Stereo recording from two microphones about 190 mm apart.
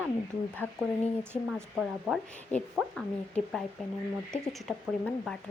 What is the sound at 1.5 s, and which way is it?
Speech, centre (ahead or behind).